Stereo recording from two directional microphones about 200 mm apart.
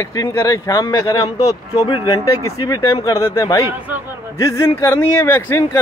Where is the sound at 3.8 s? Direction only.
5° right (ahead or behind).